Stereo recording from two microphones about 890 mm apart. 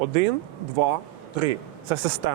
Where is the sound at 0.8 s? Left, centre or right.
Right.